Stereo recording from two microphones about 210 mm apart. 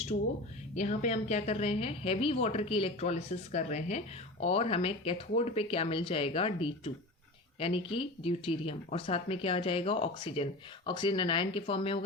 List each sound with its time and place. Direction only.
0.1 s a woman's voice: 45° left (ahead or behind); by 11.9 s 25° left (ahead or behind)